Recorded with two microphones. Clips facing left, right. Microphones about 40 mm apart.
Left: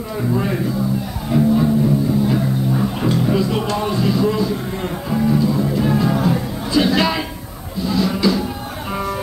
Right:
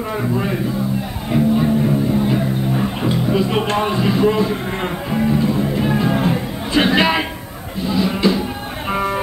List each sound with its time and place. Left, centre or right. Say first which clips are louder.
0.3 s speech: left 3 dB; centre
1.3 s music: even; right
3.3 s speech: right 2 dB; right
5.1 s music: left 1 dB; right
6.7 s music: right 2 dB; right
7.8 s music: even; right